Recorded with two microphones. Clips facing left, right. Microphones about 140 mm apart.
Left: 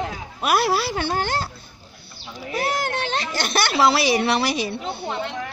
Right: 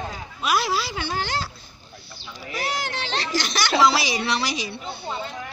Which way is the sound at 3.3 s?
55° left (ahead or behind).